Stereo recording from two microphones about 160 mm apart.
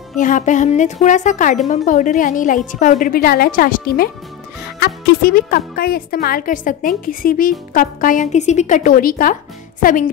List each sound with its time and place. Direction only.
0.2 s a woman's voice: 55° left (ahead or behind)